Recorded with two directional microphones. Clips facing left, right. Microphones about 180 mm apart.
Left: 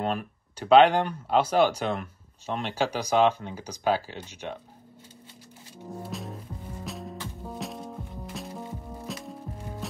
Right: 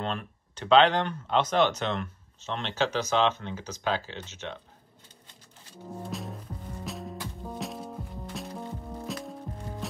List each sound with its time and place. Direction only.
0.0 s speech: 10° left (ahead or behind)
5.9 s music: centre (ahead or behind)